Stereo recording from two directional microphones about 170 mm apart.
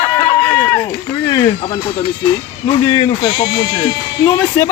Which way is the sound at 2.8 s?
25° left (ahead or behind).